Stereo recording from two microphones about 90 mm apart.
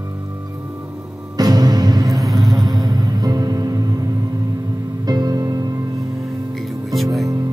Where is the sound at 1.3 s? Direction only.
45° right (ahead or behind).